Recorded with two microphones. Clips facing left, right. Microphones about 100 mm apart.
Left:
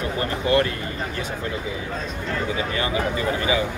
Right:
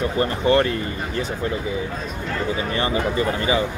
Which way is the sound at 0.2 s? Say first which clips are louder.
Right 2 dB; 30° right (ahead or behind).